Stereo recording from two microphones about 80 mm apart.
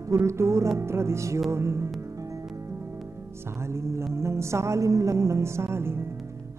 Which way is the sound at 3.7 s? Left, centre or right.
Right.